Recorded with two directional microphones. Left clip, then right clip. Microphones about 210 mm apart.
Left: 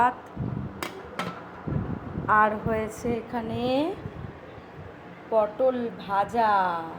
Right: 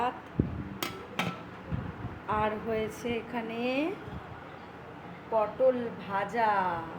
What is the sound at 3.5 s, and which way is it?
Speech, 5° right (ahead or behind).